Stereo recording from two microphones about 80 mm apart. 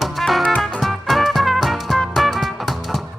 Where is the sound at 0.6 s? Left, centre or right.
Centre.